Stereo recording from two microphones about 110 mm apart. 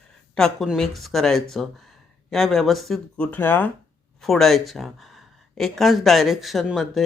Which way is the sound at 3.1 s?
15° left (ahead or behind).